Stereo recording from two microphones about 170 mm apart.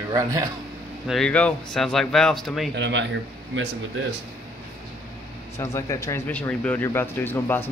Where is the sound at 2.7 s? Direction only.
90° right.